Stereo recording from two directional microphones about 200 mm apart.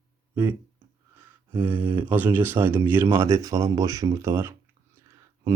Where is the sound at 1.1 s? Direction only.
10° right (ahead or behind).